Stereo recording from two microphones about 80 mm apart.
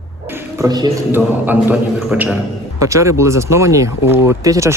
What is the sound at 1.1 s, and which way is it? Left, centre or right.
Speech, right.